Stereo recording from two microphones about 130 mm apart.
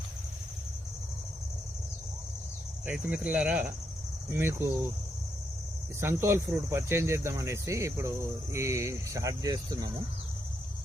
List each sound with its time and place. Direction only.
2.8 s speech: 10° right (ahead or behind)
6.0 s speech: 20° right (ahead or behind)